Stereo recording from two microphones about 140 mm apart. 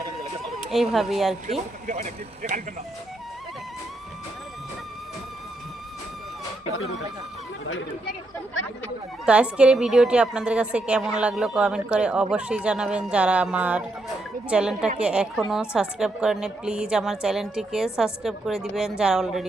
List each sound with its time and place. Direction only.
0.7 s a woman's voice: centre (ahead or behind)
1.9 s speech: 60° right (ahead or behind)
9.2 s a woman's voice: 10° right (ahead or behind)